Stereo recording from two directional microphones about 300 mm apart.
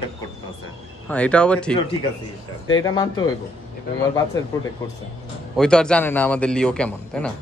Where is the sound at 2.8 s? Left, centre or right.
Centre.